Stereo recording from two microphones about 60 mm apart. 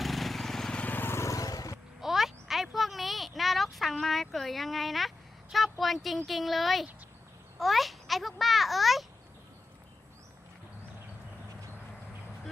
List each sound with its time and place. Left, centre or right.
0.0 s vehicle: centre
0.7 s vehicle: left
0.9 s vehicle: left
1.2 s vehicle: left
2.0 s a sound: centre
6.2 s speech: centre
7.6 s babbling: centre